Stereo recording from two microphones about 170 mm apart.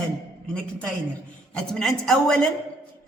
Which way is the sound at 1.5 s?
5° left (ahead or behind).